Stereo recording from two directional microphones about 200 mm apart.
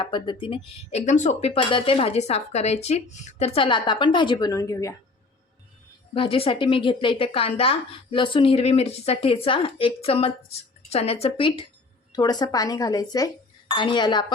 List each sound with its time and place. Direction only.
0.0 s speech: 25° left (ahead or behind)
6.1 s a woman's voice: 30° left (ahead or behind)